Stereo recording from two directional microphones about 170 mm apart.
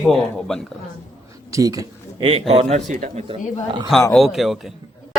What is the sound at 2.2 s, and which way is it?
A man's voice, 35° right (ahead or behind).